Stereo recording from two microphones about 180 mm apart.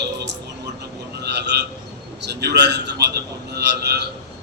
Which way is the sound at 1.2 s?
70° right (ahead or behind).